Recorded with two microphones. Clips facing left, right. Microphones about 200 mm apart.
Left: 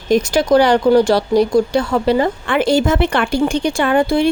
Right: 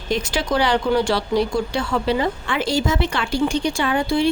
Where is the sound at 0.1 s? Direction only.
45° left (ahead or behind).